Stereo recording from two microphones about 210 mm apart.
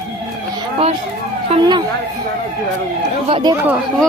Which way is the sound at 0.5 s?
25° right (ahead or behind).